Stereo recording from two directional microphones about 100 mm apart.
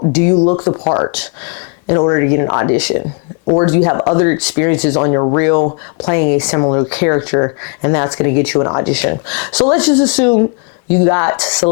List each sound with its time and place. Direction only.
0.1 s speech: 20° left (ahead or behind)
0.4 s speech: 30° left (ahead or behind)
2.7 s speech: 15° left (ahead or behind)
8.9 s speech: 15° left (ahead or behind)